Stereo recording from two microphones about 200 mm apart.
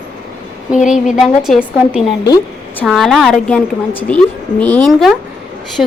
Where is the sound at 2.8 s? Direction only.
Centre (ahead or behind).